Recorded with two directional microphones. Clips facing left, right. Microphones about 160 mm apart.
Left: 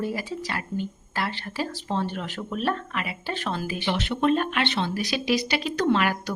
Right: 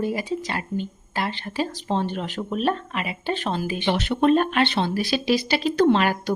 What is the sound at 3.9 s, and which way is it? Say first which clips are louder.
Speech: right 4 dB; 40° right (ahead or behind).